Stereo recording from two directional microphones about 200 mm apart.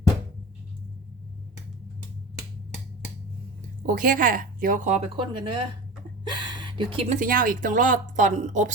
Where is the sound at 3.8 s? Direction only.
45° right (ahead or behind); by 5.6 s 25° right (ahead or behind).